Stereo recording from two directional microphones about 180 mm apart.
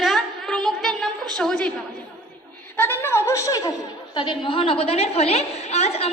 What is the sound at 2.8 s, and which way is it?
A woman's voice, 10° left (ahead or behind).